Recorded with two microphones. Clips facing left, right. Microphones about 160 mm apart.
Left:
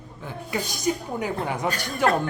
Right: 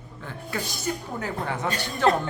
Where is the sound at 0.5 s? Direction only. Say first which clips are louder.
Left 4 dB; 15° left (ahead or behind).